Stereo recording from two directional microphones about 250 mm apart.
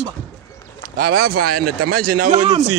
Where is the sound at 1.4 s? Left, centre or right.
Right.